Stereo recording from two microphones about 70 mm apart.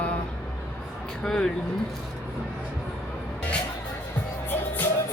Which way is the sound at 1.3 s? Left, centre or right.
Centre.